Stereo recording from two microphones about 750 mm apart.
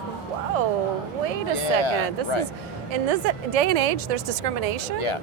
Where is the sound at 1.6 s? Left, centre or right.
Left.